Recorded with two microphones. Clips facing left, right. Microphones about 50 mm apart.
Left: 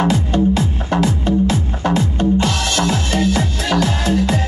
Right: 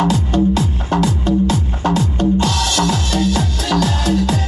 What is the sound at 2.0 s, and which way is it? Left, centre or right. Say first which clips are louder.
Music: even; left.